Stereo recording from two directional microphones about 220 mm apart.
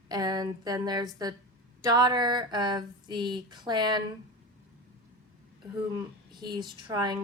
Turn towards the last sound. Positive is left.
turn(degrees=-20)  # may be behind; listen again after turning